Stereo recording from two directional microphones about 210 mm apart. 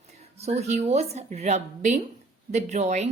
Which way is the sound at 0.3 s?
30° right (ahead or behind).